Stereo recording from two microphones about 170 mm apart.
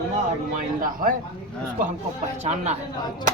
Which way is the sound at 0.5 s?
55° right (ahead or behind).